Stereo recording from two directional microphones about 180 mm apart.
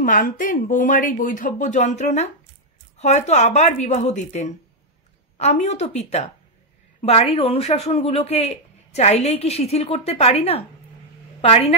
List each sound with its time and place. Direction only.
0.0 s speech: 50° left (ahead or behind)